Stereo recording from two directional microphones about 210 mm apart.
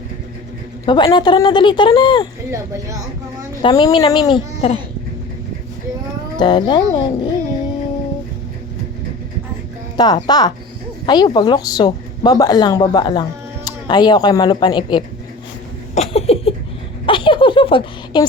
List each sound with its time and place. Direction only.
0.9 s a woman's voice: 20° left (ahead or behind)
2.5 s speech: 15° right (ahead or behind)
3.6 s a woman's voice: 20° left (ahead or behind)
6.3 s a woman's voice: 20° left (ahead or behind)
10.0 s a woman's voice: 20° left (ahead or behind)
16.0 s a sound: 30° left (ahead or behind)